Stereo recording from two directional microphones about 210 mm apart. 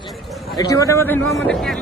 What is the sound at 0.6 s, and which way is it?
Speech, 15° left (ahead or behind).